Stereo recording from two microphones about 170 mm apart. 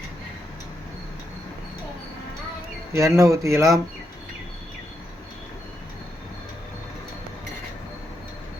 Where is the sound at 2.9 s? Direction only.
15° right (ahead or behind).